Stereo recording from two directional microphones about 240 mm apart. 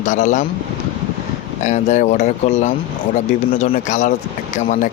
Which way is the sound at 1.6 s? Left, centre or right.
Left.